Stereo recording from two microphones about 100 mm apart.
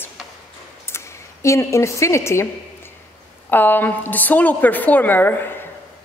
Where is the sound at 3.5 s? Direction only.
20° left (ahead or behind).